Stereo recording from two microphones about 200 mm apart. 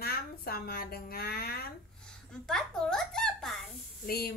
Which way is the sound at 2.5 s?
5° left (ahead or behind).